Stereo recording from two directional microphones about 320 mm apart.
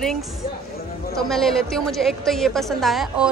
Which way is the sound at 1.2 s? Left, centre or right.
Centre.